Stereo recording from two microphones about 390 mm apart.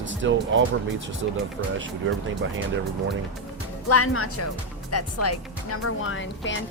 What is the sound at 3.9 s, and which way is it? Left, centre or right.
Speech, left.